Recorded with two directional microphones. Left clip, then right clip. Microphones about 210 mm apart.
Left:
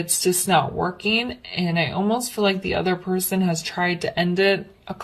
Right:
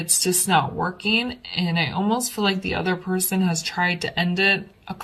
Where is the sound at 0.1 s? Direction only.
25° left (ahead or behind).